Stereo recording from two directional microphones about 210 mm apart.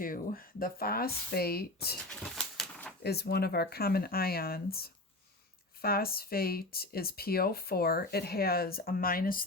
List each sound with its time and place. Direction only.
0.0 s speech: 40° left (ahead or behind)
2.3 s pigeon: centre (ahead or behind)
3.0 s speech: 50° left (ahead or behind)